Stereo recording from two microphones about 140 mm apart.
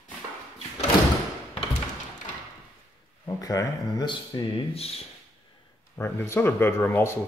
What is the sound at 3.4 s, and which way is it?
Speech, 25° left (ahead or behind).